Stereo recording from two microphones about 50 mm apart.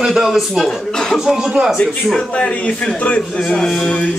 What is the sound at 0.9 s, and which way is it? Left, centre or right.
Speech, centre.